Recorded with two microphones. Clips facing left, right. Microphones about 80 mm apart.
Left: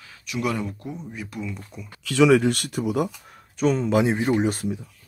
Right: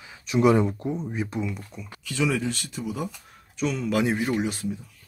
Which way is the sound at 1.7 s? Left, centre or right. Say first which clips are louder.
Even; centre.